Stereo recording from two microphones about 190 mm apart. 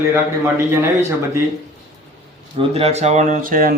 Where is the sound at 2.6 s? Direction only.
30° right (ahead or behind); by 3.7 s 45° right (ahead or behind).